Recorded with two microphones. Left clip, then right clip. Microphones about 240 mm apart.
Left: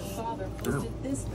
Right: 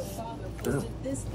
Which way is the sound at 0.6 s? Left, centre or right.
Centre.